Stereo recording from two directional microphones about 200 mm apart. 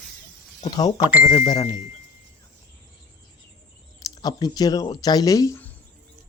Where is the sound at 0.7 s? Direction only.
20° left (ahead or behind).